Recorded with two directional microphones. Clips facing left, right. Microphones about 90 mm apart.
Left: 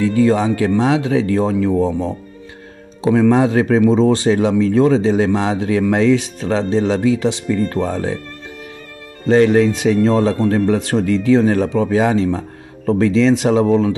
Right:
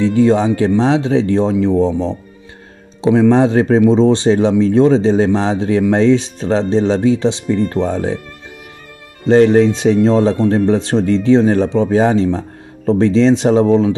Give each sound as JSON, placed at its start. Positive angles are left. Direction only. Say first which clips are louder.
{"t": 0.0, "sound": "speech", "louder": "right 2 dB", "side_deg": -30}
{"t": 9.3, "sound": "speech", "louder": "right 3 dB", "side_deg": -30}